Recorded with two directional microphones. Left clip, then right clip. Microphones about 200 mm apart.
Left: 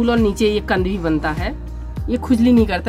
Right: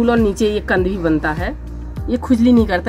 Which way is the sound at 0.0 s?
20° left (ahead or behind).